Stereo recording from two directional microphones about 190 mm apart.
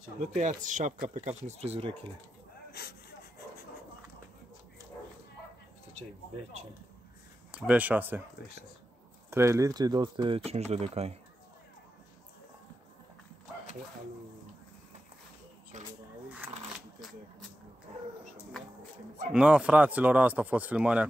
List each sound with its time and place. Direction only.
0.2 s speech: 40° right (ahead or behind)
2.7 s gasp: 55° left (ahead or behind)
7.5 s speech: 5° right (ahead or behind)
9.3 s speech: 15° right (ahead or behind); by 11.1 s 35° right (ahead or behind)
15.7 s speech: 40° right (ahead or behind)
16.4 s a sound: 10° right (ahead or behind)
19.3 s speech: 5° right (ahead or behind)